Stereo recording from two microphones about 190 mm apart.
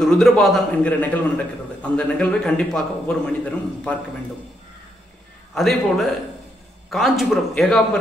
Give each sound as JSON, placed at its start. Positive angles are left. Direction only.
{"t": 0.0, "sound": "a man's voice", "side_deg": 0}
{"t": 5.5, "sound": "a man's voice", "side_deg": 0}